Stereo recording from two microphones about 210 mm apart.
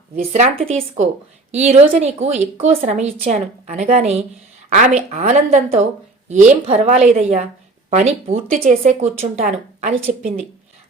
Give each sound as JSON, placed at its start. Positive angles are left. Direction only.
{"t": 0.2, "sound": "speech", "side_deg": -30}
{"t": 1.5, "sound": "speech", "side_deg": -30}